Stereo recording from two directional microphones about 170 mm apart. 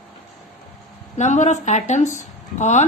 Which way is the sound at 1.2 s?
45° left (ahead or behind).